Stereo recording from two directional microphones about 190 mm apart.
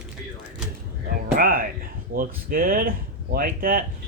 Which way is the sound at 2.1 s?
50° right (ahead or behind).